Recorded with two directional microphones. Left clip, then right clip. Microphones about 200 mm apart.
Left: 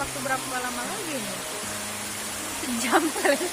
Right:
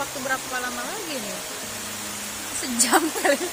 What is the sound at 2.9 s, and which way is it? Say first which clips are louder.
Speech: right 1 dB; 40° right (ahead or behind).